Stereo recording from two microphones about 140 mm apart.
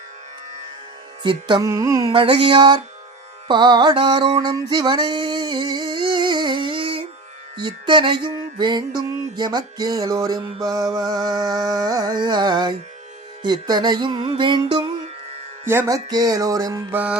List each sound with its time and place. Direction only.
1.2 s music: 35° right (ahead or behind)
2.1 s music: 40° right (ahead or behind)
4.4 s a sound: 25° right (ahead or behind)
7.5 s music: 35° right (ahead or behind)
15.6 s music: 15° right (ahead or behind)
16.0 s music: 25° right (ahead or behind)
16.9 s music: 10° right (ahead or behind)